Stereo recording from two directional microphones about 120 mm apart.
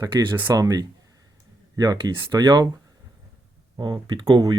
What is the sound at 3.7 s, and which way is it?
Speech, 35° right (ahead or behind).